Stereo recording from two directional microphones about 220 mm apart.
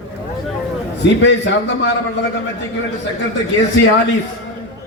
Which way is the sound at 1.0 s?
55° left (ahead or behind).